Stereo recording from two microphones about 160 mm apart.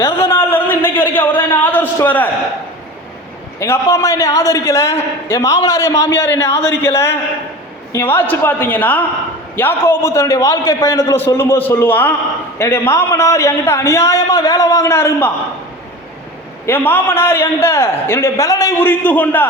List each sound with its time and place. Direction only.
0.0 s a sound: 15° left (ahead or behind)
3.6 s a man's voice: 20° left (ahead or behind)
6.6 s speech: 90° left
7.9 s a man's voice: 15° left (ahead or behind)
16.6 s a man's voice: 15° left (ahead or behind)